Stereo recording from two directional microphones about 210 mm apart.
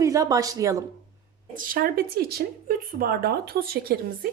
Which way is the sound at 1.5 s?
40° right (ahead or behind).